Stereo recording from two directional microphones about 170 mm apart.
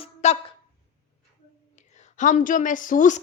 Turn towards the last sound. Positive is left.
turn(degrees=50)  # may be behind; listen again after turning